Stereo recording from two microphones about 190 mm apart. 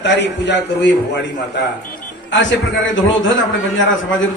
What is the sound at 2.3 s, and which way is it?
Speech, 75° left (ahead or behind).